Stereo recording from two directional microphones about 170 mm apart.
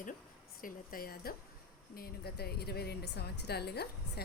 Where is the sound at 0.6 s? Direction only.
60° left (ahead or behind).